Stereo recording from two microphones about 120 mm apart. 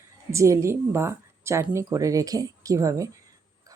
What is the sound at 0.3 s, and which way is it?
Speech, 25° right (ahead or behind).